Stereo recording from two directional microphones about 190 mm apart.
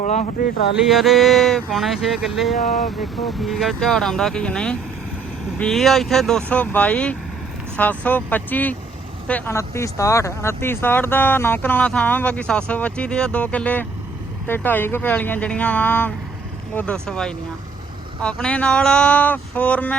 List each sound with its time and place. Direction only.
0.0 s speech: 35° left (ahead or behind)
0.9 s speech: centre (ahead or behind)
2.6 s speech: 40° left (ahead or behind)
3.0 s speech: centre (ahead or behind)